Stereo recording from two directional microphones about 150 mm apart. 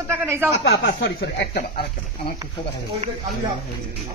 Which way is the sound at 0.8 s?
90° left.